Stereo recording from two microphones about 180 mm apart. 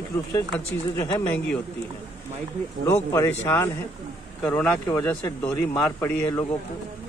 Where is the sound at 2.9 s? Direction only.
15° left (ahead or behind).